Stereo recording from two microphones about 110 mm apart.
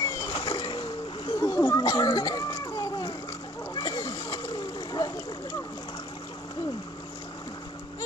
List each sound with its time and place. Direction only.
0.0 s boat: 40° left (ahead or behind)
1.4 s a sound: 25° left (ahead or behind)
1.8 s children playing: 35° left (ahead or behind)
3.7 s splash: 35° left (ahead or behind)